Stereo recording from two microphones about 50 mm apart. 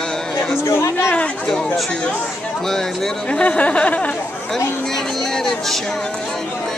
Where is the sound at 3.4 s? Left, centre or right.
Left.